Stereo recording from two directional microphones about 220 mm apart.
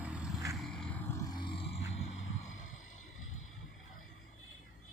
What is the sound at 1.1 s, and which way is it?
Music, 20° left (ahead or behind).